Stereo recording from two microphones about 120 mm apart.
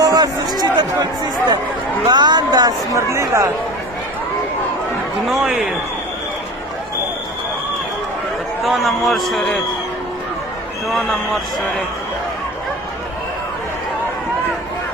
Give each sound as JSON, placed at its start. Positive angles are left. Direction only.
{"t": 0.0, "sound": "a sound", "side_deg": -35}
{"t": 2.0, "sound": "speech", "side_deg": -40}
{"t": 5.3, "sound": "a man's voice", "side_deg": -5}
{"t": 8.6, "sound": "a man's voice", "side_deg": 0}